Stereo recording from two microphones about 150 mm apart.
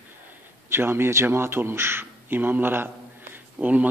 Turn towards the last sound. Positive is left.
turn(degrees=-10)  # may be behind; listen again after turning